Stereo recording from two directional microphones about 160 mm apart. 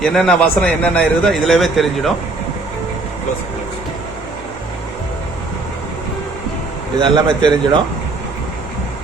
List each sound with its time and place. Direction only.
0.0 s a man's voice: 5° left (ahead or behind)
7.0 s speech: 30° right (ahead or behind)